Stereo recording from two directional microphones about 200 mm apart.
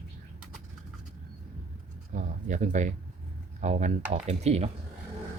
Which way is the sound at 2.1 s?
40° right (ahead or behind).